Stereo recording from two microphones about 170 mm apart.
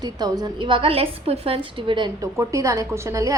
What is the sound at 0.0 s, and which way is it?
A woman's voice, 25° right (ahead or behind).